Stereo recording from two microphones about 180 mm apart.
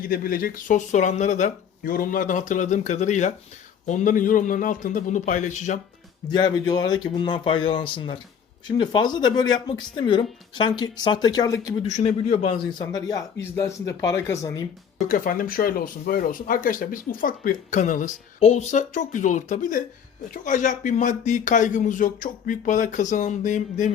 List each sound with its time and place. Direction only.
0.0 s speech: 50° left (ahead or behind)
6.3 s speech: 25° left (ahead or behind)
11.9 s a man's voice: 40° left (ahead or behind)
12.9 s speech: 20° left (ahead or behind)
15.0 s speech: 50° left (ahead or behind)